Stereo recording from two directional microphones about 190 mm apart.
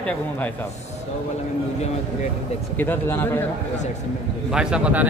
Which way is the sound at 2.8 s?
10° left (ahead or behind).